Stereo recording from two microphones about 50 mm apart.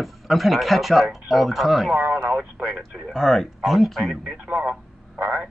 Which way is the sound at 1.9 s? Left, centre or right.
Right.